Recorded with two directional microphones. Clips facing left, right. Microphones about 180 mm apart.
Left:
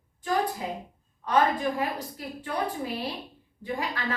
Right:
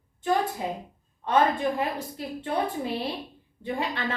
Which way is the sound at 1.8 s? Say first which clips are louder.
Right 1 dB; 25° right (ahead or behind).